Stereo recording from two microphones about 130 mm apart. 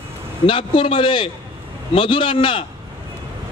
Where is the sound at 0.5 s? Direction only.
40° left (ahead or behind).